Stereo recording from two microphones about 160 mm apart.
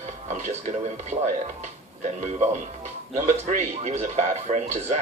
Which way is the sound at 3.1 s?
50° right (ahead or behind).